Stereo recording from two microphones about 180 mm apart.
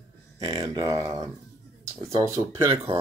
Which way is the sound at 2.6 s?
30° right (ahead or behind).